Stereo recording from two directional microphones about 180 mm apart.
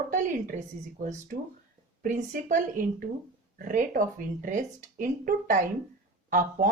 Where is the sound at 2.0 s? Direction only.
45° right (ahead or behind).